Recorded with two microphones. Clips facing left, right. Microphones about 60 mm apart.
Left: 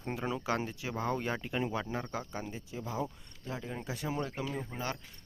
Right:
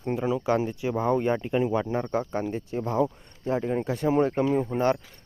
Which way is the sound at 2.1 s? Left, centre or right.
Right.